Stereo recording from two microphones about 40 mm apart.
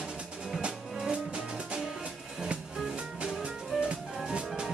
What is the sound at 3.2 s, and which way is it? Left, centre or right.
Music, right.